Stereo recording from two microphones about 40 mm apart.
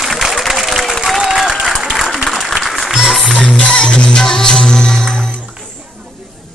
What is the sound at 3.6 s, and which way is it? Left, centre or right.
Music, left.